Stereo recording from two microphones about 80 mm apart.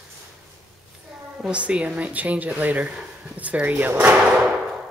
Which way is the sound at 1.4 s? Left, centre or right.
Centre.